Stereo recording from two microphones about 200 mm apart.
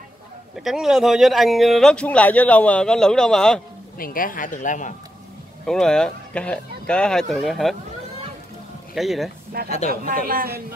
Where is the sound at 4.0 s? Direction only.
45° left (ahead or behind).